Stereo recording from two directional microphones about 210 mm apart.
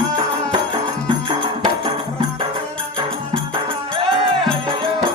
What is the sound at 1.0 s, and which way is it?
Music, 25° right (ahead or behind).